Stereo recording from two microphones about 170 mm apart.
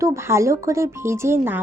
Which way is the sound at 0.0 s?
15° right (ahead or behind).